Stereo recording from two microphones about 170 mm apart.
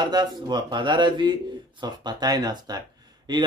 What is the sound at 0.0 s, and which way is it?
Speech, 25° right (ahead or behind).